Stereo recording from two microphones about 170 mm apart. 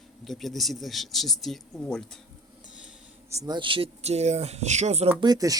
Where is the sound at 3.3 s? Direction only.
20° right (ahead or behind); by 5.1 s 40° right (ahead or behind).